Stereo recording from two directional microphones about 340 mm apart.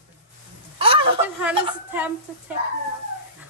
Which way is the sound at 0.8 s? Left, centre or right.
Centre.